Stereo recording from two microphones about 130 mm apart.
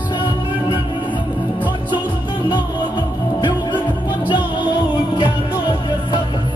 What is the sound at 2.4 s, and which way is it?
Music, 35° left (ahead or behind).